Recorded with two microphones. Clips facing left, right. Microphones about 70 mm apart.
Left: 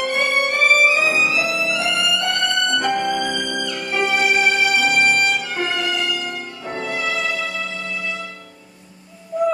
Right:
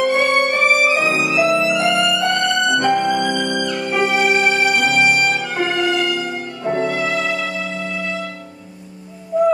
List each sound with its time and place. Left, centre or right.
0.0 s music: centre
4.8 s music: right
5.3 s music: centre
6.0 s music: centre
6.9 s music: centre
7.2 s music: centre